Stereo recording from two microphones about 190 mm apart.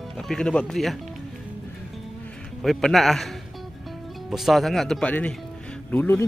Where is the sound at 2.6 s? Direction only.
Centre (ahead or behind).